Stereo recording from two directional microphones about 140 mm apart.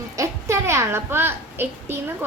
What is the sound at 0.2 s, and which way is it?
A child's voice, 20° right (ahead or behind).